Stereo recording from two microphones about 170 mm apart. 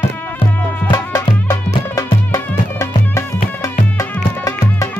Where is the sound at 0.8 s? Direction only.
20° left (ahead or behind).